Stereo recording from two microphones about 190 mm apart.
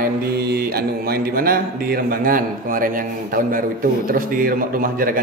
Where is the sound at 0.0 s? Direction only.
55° right (ahead or behind).